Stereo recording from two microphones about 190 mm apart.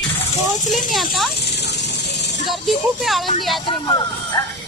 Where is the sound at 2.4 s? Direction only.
Centre (ahead or behind).